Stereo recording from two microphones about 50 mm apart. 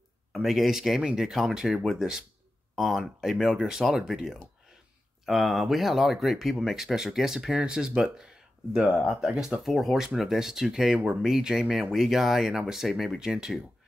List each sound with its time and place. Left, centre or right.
0.3 s speech: centre
5.2 s speech: centre
9.6 s speech: centre